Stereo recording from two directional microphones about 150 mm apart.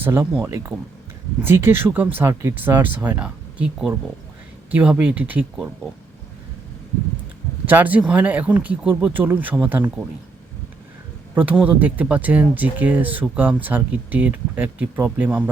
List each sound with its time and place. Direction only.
0.0 s speech: 15° right (ahead or behind)
7.7 s speech: 10° right (ahead or behind)
11.6 s speech: 10° right (ahead or behind)